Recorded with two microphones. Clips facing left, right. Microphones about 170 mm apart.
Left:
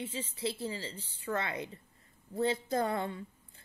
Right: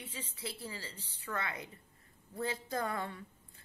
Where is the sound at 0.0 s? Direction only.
25° left (ahead or behind).